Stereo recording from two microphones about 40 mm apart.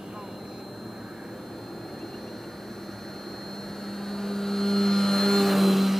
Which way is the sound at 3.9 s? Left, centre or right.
Centre.